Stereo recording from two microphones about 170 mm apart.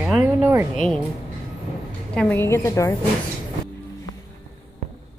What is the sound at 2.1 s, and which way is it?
Speech, 10° left (ahead or behind).